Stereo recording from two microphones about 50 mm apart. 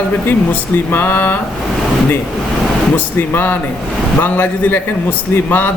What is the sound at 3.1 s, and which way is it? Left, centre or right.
Speech, left.